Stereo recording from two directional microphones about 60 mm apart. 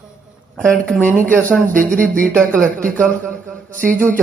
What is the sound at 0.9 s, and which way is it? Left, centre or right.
Speech, left.